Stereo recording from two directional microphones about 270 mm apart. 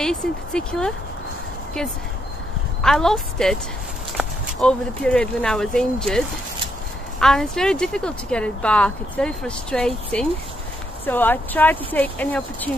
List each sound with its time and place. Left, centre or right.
0.0 s speech: centre
2.8 s speech: centre